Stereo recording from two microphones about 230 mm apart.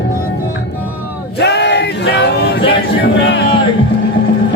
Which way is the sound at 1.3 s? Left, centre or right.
Left.